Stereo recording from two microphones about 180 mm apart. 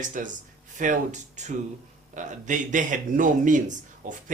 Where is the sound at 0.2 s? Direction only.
50° right (ahead or behind).